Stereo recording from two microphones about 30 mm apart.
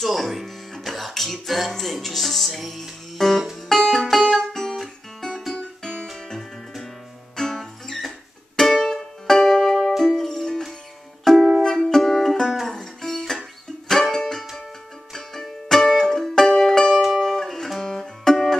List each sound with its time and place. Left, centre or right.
0.0 s music: centre
1.8 s speech: centre
3.2 s music: centre
5.6 s music: left
17.7 s music: left
18.3 s music: centre